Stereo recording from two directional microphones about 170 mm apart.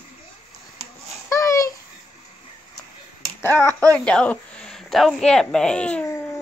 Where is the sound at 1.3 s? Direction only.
20° left (ahead or behind).